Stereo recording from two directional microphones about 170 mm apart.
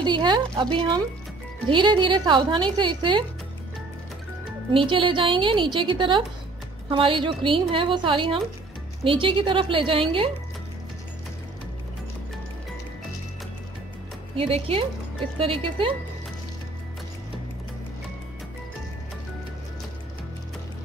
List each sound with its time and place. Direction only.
0.0 s speech: 25° right (ahead or behind)
4.7 s a woman's voice: 30° right (ahead or behind)
14.3 s a woman's voice: 35° right (ahead or behind)